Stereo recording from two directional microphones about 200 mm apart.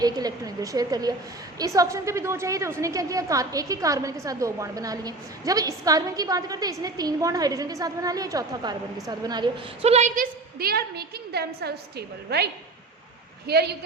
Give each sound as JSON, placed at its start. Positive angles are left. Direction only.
{"t": 0.0, "sound": "a woman's voice", "side_deg": -20}
{"t": 9.8, "sound": "a woman's voice", "side_deg": -35}
{"t": 10.6, "sound": "a woman's voice", "side_deg": -50}
{"t": 13.5, "sound": "a woman's voice", "side_deg": -55}